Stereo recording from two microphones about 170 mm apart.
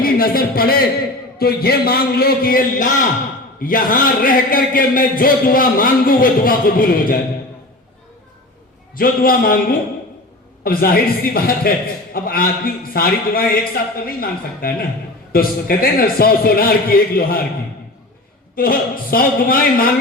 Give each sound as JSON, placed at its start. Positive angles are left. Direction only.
{"t": 0.0, "sound": "a sound", "side_deg": 60}
{"t": 1.4, "sound": "a man's voice", "side_deg": 65}
{"t": 9.0, "sound": "a man's voice", "side_deg": 60}
{"t": 18.5, "sound": "a man's voice", "side_deg": 60}